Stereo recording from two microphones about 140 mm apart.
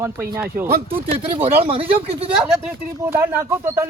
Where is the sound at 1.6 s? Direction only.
40° right (ahead or behind).